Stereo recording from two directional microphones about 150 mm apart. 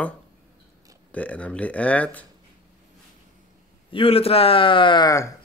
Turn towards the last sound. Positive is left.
turn(degrees=20)  # may be behind; listen again after turning